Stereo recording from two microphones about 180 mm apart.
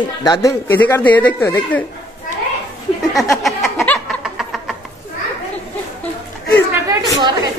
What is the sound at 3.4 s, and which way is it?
Snicker, centre (ahead or behind).